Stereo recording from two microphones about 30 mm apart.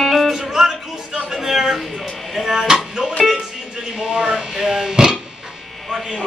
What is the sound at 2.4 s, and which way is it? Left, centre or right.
Speech, right.